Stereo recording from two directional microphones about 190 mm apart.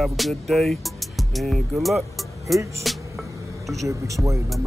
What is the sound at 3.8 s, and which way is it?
Speech, 15° right (ahead or behind).